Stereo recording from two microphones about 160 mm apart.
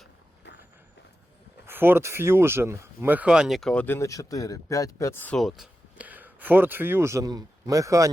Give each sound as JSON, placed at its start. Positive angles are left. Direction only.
{"t": 0.4, "sound": "vehicle", "side_deg": 90}
{"t": 1.6, "sound": "speech", "side_deg": -15}
{"t": 5.4, "sound": "speech", "side_deg": 0}